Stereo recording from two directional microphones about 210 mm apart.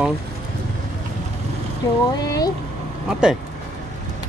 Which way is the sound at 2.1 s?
20° left (ahead or behind).